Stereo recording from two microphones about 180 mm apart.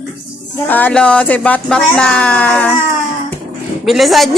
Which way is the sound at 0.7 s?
10° left (ahead or behind).